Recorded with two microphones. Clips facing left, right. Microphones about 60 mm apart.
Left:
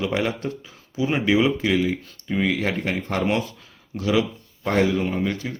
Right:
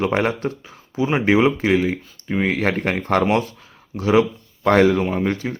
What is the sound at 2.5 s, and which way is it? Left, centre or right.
Speech, right.